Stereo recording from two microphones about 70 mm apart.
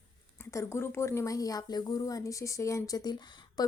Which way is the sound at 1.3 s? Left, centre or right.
Left.